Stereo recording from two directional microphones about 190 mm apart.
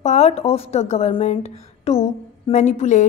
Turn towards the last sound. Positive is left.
turn(degrees=40)  # may be behind; listen again after turning